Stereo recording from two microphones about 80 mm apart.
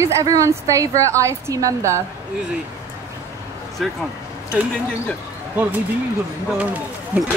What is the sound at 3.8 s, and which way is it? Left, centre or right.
Speech, centre.